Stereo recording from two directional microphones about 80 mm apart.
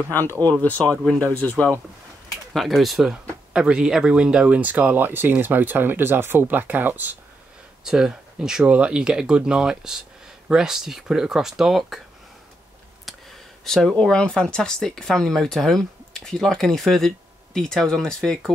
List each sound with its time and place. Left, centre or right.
0.1 s speech: left
2.5 s speech: centre; by 7.2 s right
7.8 s speech: centre
13.1 s a sound: centre
13.7 s speech: centre
13.9 s speech: centre